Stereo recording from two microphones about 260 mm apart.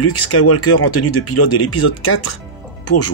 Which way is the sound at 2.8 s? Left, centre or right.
Left.